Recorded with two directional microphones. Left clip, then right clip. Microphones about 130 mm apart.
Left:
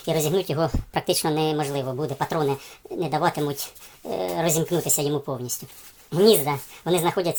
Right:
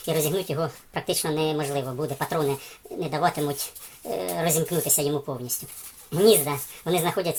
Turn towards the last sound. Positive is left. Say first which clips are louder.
# left 2 dB
turn(degrees=40)  # may be behind; listen again after turning